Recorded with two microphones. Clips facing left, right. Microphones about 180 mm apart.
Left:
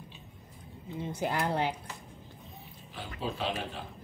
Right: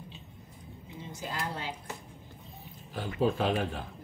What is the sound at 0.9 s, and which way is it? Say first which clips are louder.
Speech: left 6 dB; 60° left (ahead or behind).